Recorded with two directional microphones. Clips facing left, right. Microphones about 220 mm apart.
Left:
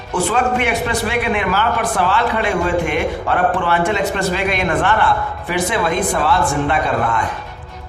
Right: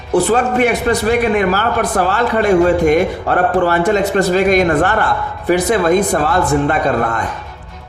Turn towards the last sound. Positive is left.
turn(degrees=-45)  # may be behind; listen again after turning